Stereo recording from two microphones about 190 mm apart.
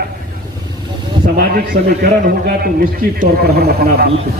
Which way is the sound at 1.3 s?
55° right (ahead or behind).